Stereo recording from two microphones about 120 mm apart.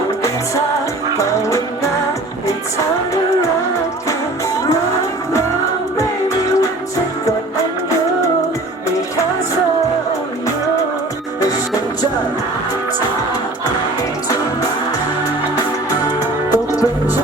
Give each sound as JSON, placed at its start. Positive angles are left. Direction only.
{"t": 1.1, "sound": "music", "side_deg": 25}
{"t": 6.0, "sound": "music", "side_deg": 25}
{"t": 15.9, "sound": "music", "side_deg": 30}